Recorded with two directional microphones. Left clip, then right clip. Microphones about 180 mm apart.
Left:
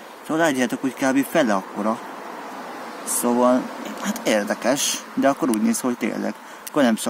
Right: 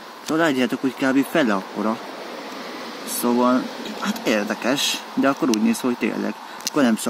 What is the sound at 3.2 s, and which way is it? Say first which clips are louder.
Speech: left 1 dB; 20° left (ahead or behind).